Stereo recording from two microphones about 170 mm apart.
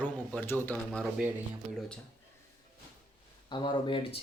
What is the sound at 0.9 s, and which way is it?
Speech, centre (ahead or behind).